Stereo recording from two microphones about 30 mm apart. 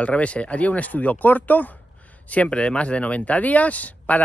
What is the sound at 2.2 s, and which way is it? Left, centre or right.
Speech, left.